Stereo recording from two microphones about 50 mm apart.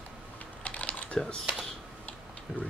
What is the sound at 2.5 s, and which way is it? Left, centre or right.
Speech, centre.